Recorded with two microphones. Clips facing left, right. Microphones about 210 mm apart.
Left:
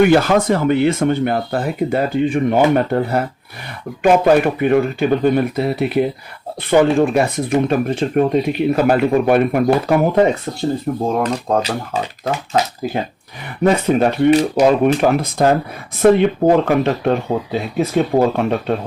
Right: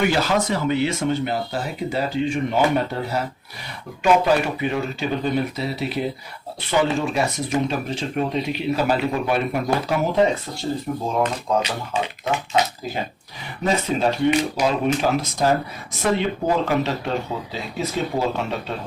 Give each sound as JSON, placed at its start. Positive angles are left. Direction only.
{"t": 0.0, "sound": "speech", "side_deg": 55}
{"t": 11.2, "sound": "speech", "side_deg": 40}
{"t": 13.7, "sound": "speech", "side_deg": 60}